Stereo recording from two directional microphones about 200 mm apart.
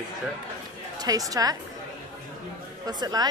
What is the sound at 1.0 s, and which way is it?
Speech, 20° right (ahead or behind).